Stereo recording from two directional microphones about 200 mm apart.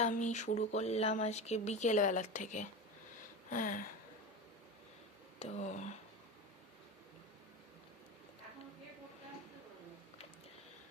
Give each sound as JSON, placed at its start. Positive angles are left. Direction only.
{"t": 0.0, "sound": "speech", "side_deg": 35}
{"t": 3.5, "sound": "a sound", "side_deg": 45}
{"t": 5.4, "sound": "speech", "side_deg": 35}